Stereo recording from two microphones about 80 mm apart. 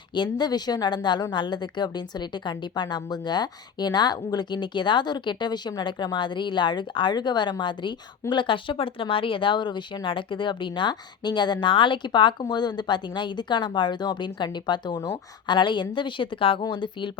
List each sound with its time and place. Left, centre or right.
0.1 s a woman's voice: left